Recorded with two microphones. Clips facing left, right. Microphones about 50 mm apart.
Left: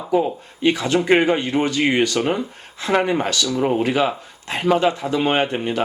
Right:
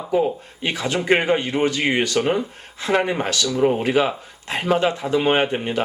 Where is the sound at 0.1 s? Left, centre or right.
Centre.